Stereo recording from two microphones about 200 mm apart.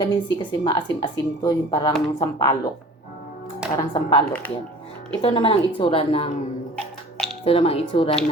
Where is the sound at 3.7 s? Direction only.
25° left (ahead or behind).